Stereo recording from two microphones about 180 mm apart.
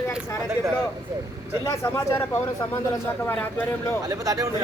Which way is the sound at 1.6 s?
15° left (ahead or behind).